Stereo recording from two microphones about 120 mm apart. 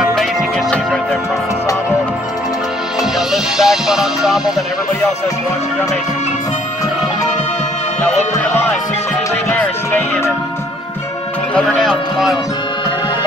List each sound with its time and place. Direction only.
0.1 s music: 5° left (ahead or behind)
3.2 s music: 5° right (ahead or behind)
9.5 s music: 15° left (ahead or behind)
11.5 s a man's voice: 5° left (ahead or behind)